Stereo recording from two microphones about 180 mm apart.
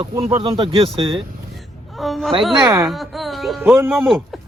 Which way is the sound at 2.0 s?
Centre (ahead or behind).